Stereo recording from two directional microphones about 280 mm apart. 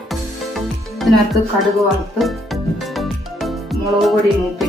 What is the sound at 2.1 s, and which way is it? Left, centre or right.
Music, centre.